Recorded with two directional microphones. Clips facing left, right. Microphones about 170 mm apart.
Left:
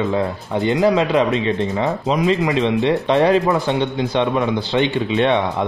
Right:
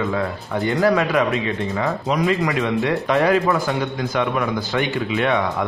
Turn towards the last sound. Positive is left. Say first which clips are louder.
# left 3 dB
turn(degrees=25)  # may be behind; listen again after turning